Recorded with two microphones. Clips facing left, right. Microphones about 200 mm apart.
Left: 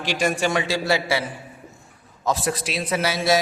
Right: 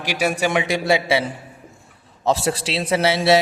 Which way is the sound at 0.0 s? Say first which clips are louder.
Right 1 dB; 10° right (ahead or behind).